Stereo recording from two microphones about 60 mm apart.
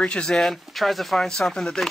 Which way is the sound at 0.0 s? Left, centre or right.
Centre.